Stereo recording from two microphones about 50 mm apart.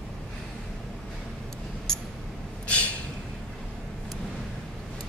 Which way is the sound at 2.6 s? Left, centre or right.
Left.